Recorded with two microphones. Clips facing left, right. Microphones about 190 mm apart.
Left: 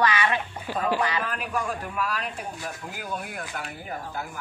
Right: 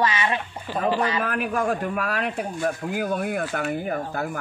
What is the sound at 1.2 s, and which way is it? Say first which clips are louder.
Speech: right 5 dB; 60° right (ahead or behind).